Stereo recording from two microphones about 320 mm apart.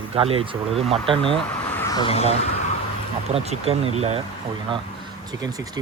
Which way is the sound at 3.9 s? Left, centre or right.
Centre.